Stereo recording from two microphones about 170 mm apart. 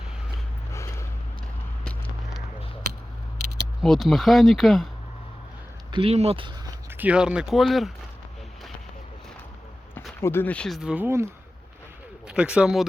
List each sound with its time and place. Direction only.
0.7 s vehicle: 15° left (ahead or behind)
1.8 s a sound: 5° left (ahead or behind)
3.8 s speech: centre (ahead or behind)
5.9 s speech: 35° right (ahead or behind)
6.9 s speech: 10° right (ahead or behind)
10.2 s speech: 15° left (ahead or behind); by 11.3 s 15° right (ahead or behind)
12.3 s speech: 5° right (ahead or behind)